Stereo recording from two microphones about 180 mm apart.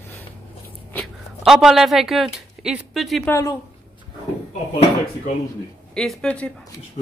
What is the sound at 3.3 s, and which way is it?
Speech, 15° left (ahead or behind).